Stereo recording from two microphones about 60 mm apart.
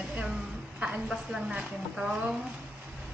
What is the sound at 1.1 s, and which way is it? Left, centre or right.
A woman's voice, centre.